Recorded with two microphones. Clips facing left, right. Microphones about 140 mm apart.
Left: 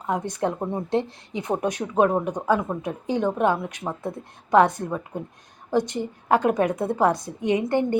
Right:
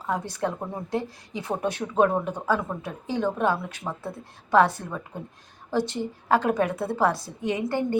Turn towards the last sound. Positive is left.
turn(degrees=20)  # may be behind; listen again after turning